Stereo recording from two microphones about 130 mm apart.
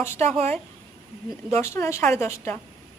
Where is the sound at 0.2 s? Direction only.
55° right (ahead or behind).